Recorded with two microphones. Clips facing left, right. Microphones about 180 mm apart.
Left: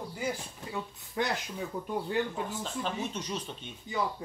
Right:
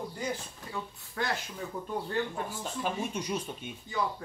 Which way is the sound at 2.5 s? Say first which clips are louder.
Even; 10° right (ahead or behind).